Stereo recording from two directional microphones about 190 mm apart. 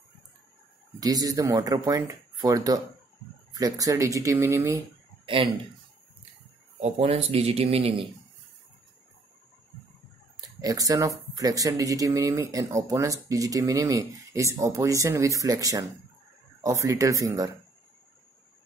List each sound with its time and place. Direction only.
0.9 s speech: 20° right (ahead or behind)
5.2 s speech: 25° right (ahead or behind)
6.8 s speech: 30° right (ahead or behind)
10.6 s speech: 20° right (ahead or behind)